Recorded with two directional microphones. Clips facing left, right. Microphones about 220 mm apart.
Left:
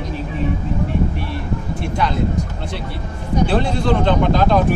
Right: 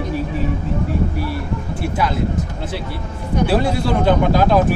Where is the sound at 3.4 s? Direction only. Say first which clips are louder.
Right 1 dB; 10° right (ahead or behind).